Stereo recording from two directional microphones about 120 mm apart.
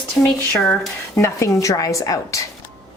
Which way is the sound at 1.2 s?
25° left (ahead or behind).